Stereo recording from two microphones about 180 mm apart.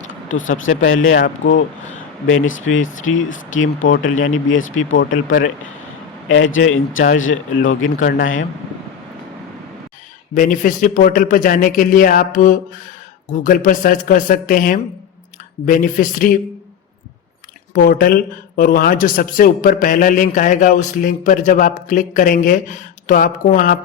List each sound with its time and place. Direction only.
0.1 s a sound: 90° left
0.9 s speech: 50° left (ahead or behind)
2.4 s speech: 90° left
4.9 s speech: 50° left (ahead or behind)
6.2 s speech: 90° left
7.9 s speech: 45° left (ahead or behind)
10.3 s speech: 50° left (ahead or behind)
17.7 s speech: 55° left (ahead or behind)